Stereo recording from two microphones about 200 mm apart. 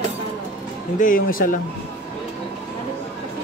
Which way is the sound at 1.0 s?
45° left (ahead or behind).